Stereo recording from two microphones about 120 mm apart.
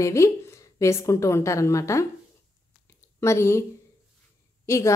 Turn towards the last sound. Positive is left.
turn(degrees=25)  # may be behind; listen again after turning